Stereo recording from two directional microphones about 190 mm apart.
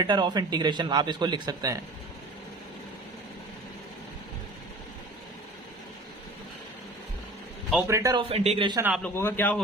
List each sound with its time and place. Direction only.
0.0 s a man's voice: 25° right (ahead or behind)
7.9 s a man's voice: 15° right (ahead or behind)
8.3 s a man's voice: 30° right (ahead or behind)
9.0 s a man's voice: 10° left (ahead or behind)